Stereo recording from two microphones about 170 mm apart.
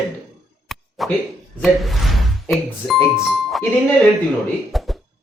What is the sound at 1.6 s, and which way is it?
Speech, centre (ahead or behind).